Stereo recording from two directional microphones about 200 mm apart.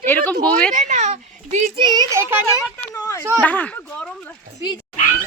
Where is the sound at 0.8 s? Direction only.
40° right (ahead or behind).